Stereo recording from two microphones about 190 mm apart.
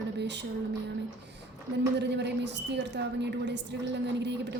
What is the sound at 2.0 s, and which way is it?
A woman's voice, 65° right (ahead or behind).